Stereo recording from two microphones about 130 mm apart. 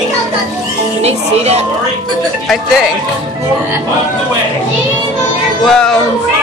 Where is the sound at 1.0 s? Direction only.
55° right (ahead or behind).